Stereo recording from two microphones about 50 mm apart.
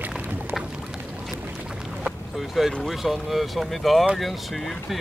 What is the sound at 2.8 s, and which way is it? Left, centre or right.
Speech, centre.